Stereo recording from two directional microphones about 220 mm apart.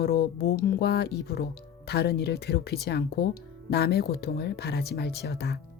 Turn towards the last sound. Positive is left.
turn(degrees=50)  # may be behind; listen again after turning